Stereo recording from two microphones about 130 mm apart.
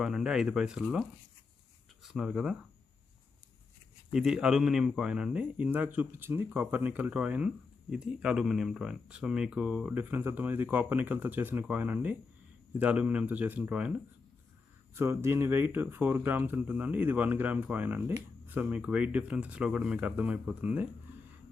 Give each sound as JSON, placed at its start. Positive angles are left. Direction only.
{"t": 0.0, "sound": "speech", "side_deg": -5}
{"t": 2.0, "sound": "speech", "side_deg": -5}
{"t": 4.1, "sound": "speech", "side_deg": -5}
{"t": 14.9, "sound": "speech", "side_deg": -20}